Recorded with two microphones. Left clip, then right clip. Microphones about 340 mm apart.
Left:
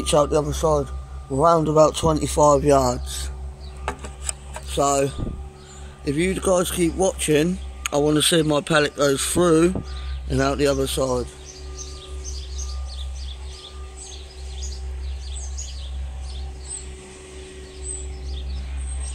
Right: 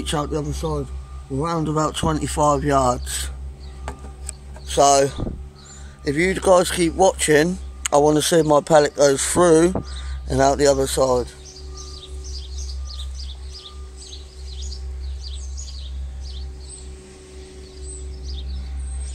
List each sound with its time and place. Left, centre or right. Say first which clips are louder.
0.0 s a man's voice: left 6 dB; centre
4.6 s speech: right 5 dB; right